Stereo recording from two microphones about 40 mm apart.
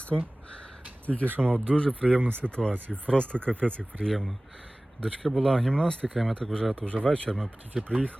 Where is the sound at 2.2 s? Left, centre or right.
Right.